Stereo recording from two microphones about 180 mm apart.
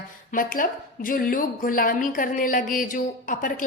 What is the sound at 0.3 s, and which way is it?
A woman's voice, 50° left (ahead or behind).